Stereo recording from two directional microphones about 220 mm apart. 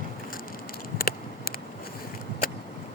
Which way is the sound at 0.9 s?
40° left (ahead or behind).